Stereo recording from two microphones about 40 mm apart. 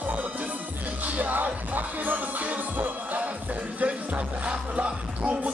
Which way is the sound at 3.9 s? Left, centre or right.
Right.